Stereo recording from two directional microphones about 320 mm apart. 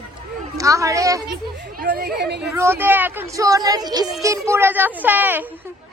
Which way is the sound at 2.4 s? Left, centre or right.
Centre.